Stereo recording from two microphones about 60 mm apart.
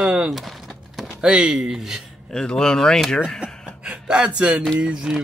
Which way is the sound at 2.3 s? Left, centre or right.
Centre.